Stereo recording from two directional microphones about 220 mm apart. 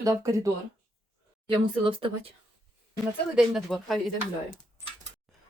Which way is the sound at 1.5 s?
25° right (ahead or behind).